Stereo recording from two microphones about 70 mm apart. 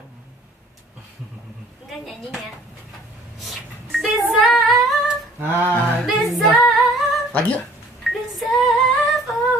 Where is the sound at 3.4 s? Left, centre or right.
Centre.